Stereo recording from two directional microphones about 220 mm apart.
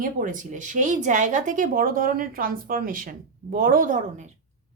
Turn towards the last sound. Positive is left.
turn(degrees=-35)  # may be behind; listen again after turning